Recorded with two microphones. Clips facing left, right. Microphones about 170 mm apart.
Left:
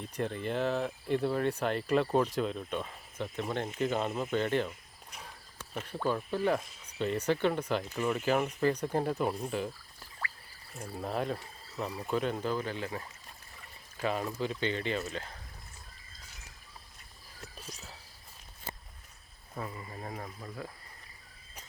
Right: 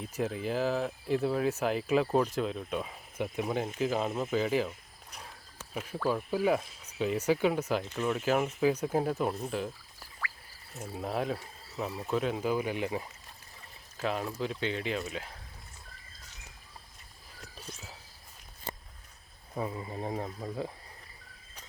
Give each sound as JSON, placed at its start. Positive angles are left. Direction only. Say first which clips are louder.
{"t": 0.0, "sound": "speech", "louder": "right 1 dB", "side_deg": -5}
{"t": 5.7, "sound": "speech", "louder": "right 1 dB", "side_deg": -5}
{"t": 10.8, "sound": "speech", "louder": "right 1 dB", "side_deg": -5}
{"t": 13.9, "sound": "speech", "louder": "even", "side_deg": 0}
{"t": 19.5, "sound": "speech", "louder": "right 5 dB", "side_deg": -20}